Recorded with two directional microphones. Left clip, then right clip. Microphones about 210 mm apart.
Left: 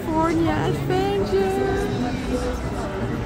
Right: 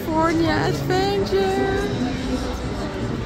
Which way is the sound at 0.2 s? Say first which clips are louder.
Right 2 dB; 5° right (ahead or behind).